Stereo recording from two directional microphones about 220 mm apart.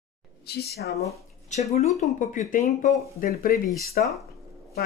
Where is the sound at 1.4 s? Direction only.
30° left (ahead or behind).